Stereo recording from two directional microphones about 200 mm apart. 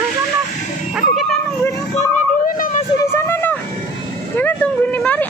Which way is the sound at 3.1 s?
10° left (ahead or behind).